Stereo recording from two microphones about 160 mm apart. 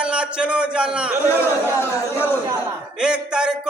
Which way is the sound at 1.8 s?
15° left (ahead or behind).